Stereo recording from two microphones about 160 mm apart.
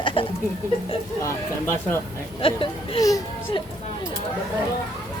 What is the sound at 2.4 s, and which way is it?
Speech, 35° left (ahead or behind).